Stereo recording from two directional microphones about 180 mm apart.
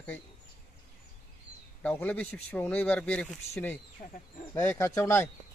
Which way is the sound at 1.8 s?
10° left (ahead or behind).